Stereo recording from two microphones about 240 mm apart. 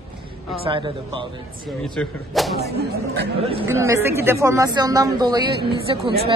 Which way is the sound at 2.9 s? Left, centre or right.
Right.